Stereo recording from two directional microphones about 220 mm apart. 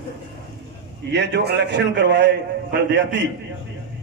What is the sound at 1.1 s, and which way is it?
A man's voice, 50° right (ahead or behind).